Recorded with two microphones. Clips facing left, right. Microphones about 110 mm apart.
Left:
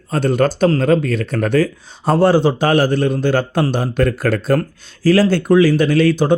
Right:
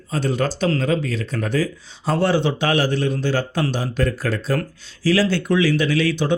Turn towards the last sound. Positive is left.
turn(degrees=45)  # may be behind; listen again after turning